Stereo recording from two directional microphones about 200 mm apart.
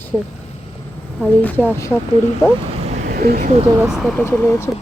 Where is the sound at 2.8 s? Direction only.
35° right (ahead or behind).